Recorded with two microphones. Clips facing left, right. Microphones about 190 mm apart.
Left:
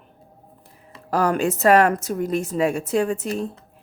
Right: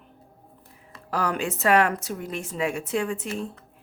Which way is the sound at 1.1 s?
45° left (ahead or behind).